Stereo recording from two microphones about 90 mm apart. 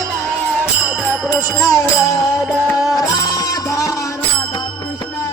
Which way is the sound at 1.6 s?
45° left (ahead or behind).